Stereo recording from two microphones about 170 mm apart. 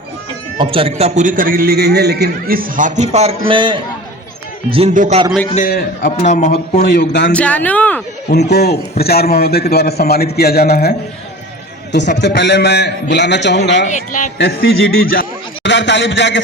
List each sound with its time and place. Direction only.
0.6 s a man's voice: 30° right (ahead or behind)
4.9 s a man's voice: 45° right (ahead or behind)
5.5 s a man's voice: 55° left (ahead or behind)
6.8 s a man's voice: 80° left
7.3 s speech: 10° left (ahead or behind)
8.3 s a man's voice: 75° left (ahead or behind)
11.9 s a man's voice: 90° left
13.8 s a man's voice: 45° left (ahead or behind)
14.3 s a man's voice: 75° left (ahead or behind)